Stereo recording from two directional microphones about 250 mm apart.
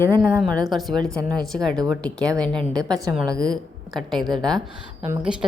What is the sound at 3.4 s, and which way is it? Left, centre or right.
A woman's voice, centre.